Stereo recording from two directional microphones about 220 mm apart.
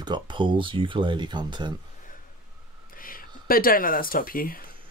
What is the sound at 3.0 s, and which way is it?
Speech, 40° left (ahead or behind).